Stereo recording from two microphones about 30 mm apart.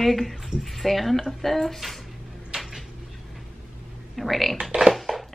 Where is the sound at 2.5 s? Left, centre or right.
Right.